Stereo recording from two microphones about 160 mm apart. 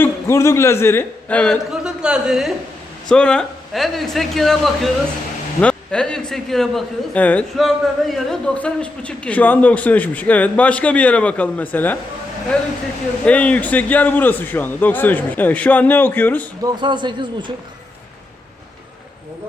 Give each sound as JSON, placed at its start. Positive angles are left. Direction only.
{"t": 0.0, "sound": "a man's voice", "side_deg": 15}
{"t": 1.7, "sound": "a man's voice", "side_deg": -5}
{"t": 13.2, "sound": "a man's voice", "side_deg": 10}
{"t": 16.6, "sound": "a man's voice", "side_deg": -30}